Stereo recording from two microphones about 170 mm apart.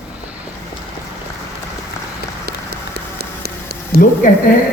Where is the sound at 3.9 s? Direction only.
70° right (ahead or behind).